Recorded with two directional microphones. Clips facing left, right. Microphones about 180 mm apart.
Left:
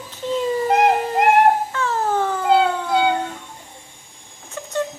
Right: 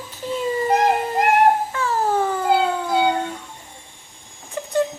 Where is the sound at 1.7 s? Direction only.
10° right (ahead or behind).